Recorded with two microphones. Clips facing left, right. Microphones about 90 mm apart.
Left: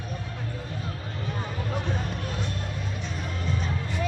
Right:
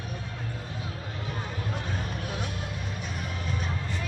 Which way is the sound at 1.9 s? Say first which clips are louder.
Left 2 dB; centre (ahead or behind).